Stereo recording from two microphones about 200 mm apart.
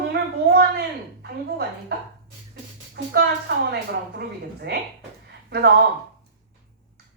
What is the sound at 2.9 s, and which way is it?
Speech, 55° right (ahead or behind).